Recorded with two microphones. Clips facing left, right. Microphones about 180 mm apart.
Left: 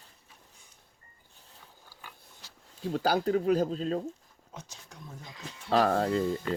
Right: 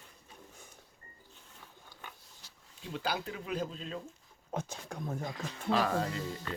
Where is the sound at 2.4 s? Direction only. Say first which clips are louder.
Left 5 dB; 90° left.